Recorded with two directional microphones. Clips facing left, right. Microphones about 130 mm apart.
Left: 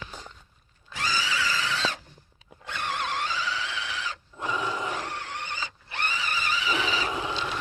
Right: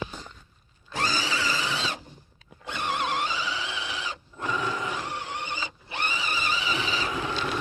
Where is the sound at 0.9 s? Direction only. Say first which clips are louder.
Right 1 dB; 35° right (ahead or behind); by 4.2 s 15° right (ahead or behind).